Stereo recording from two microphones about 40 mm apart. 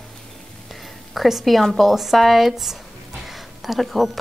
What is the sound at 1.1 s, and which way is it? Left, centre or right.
A woman's voice, centre.